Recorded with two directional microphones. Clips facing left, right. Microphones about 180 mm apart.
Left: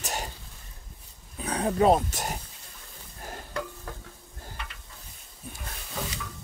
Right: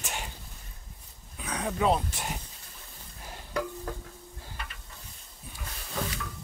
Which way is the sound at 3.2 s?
50° left (ahead or behind).